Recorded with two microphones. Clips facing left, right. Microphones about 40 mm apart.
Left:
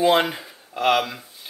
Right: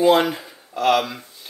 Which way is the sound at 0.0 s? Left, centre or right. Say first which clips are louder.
Right 2 dB; centre.